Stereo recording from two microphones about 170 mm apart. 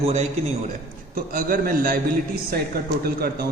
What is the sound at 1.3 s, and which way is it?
Speech, 60° right (ahead or behind).